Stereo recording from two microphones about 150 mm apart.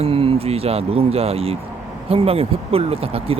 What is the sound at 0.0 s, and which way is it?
Speech, 40° right (ahead or behind).